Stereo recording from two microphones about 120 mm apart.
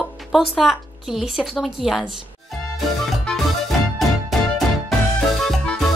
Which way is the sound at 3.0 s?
Centre (ahead or behind).